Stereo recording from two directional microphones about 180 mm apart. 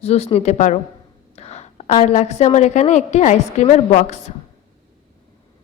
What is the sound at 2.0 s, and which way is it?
A woman's voice, 40° left (ahead or behind).